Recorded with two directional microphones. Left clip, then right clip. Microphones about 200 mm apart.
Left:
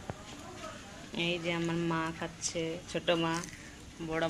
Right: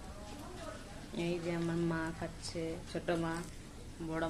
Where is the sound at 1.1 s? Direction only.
40° left (ahead or behind).